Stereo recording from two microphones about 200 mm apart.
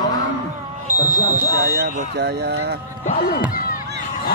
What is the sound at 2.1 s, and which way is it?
Speech, 60° right (ahead or behind).